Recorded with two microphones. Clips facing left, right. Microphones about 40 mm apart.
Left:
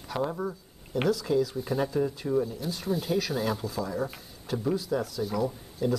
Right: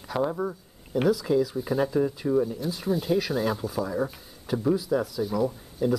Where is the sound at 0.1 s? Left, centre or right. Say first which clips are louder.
Right 3 dB; centre.